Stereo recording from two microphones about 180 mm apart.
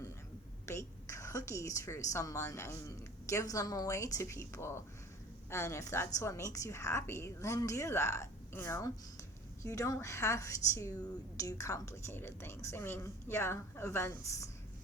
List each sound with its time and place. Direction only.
0.6 s a woman's voice: 15° left (ahead or behind)